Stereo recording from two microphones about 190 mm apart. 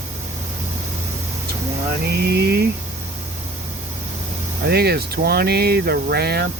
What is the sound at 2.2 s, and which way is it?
Speech, 60° right (ahead or behind).